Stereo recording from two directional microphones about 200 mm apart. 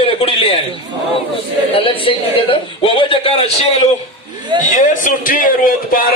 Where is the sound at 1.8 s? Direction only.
25° left (ahead or behind).